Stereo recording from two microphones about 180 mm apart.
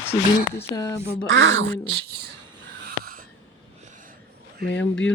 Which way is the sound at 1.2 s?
90° right.